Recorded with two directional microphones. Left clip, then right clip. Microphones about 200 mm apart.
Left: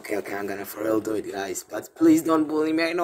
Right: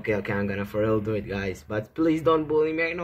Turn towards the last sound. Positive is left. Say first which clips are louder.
# even
turn(degrees=50)  # may be behind; listen again after turning